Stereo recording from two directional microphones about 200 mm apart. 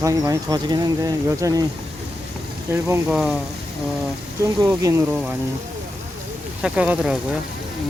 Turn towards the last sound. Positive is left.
turn(degrees=-5)  # may be behind; listen again after turning